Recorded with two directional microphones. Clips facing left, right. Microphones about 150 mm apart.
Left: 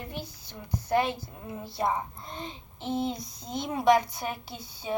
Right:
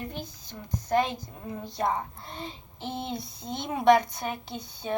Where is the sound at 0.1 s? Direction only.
10° left (ahead or behind).